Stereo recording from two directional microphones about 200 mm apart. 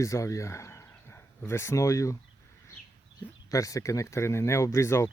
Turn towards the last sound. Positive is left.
turn(degrees=15)  # may be behind; listen again after turning